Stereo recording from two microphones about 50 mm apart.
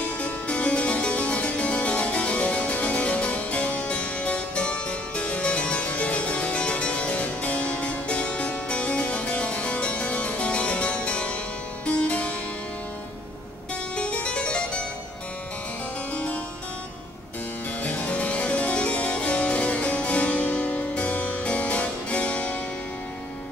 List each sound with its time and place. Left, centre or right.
0.2 s harpsichord: left
13.9 s music: left
17.8 s harpsichord: left